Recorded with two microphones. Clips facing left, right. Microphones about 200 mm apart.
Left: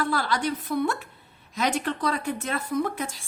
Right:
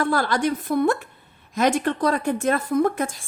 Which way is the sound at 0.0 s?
50° right (ahead or behind).